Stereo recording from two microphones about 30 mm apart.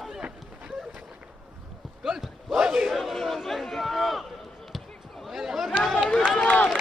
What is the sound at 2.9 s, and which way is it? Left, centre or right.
Crowd, centre.